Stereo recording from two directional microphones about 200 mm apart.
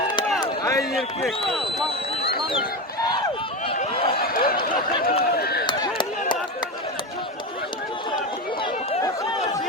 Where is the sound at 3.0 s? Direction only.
20° left (ahead or behind).